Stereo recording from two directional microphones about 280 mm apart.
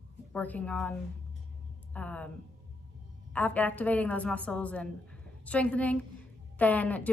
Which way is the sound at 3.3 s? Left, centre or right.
Centre.